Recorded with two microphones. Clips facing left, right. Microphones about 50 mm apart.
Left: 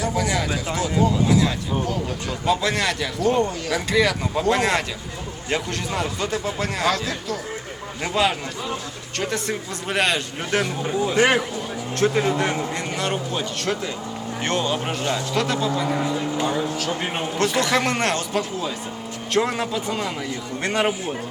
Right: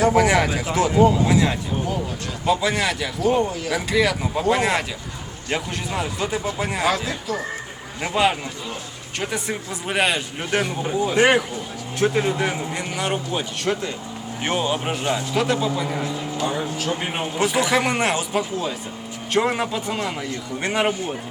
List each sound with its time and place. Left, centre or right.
0.0 s speech: right
1.0 s speech: right
2.5 s a man's voice: centre
16.5 s a man's voice: centre